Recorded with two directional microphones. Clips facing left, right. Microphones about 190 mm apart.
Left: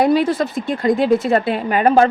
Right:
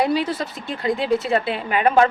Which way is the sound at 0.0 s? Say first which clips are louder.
Left 6 dB; 50° left (ahead or behind).